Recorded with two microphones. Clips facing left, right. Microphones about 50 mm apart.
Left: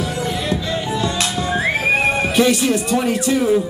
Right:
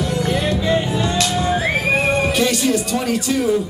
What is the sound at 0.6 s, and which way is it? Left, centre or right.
Music, centre.